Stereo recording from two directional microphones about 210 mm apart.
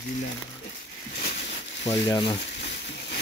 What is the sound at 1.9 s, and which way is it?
Speech, 20° left (ahead or behind).